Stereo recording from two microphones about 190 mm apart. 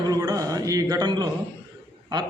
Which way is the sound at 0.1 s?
20° right (ahead or behind).